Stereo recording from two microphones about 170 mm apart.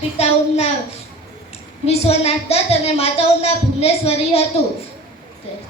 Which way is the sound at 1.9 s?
40° left (ahead or behind).